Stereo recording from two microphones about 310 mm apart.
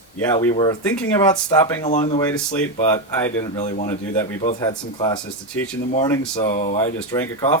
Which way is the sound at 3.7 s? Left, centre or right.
Left.